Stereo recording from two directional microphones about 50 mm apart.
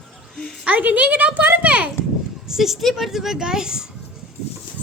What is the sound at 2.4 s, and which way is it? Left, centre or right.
A child's voice, centre.